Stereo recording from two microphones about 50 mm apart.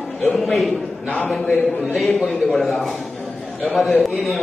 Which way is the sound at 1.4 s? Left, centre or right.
Centre.